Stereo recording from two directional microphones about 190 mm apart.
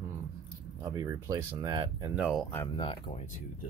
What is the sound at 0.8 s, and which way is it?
Speech, 20° right (ahead or behind).